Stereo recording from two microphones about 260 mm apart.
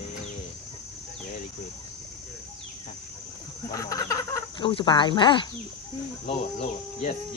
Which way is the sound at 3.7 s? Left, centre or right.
Centre.